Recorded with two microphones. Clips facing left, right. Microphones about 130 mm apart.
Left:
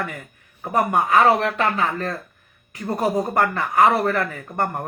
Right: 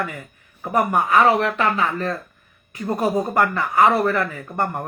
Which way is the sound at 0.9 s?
30° left (ahead or behind).